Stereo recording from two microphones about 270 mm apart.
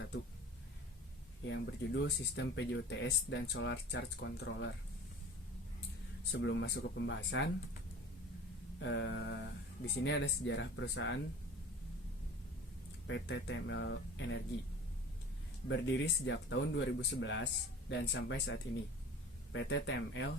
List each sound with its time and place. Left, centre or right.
1.5 s speech: left
6.3 s speech: left
8.8 s speech: left
13.1 s speech: left
15.7 s speech: left